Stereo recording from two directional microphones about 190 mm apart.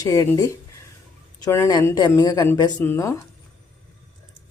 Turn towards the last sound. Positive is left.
turn(degrees=15)  # may be behind; listen again after turning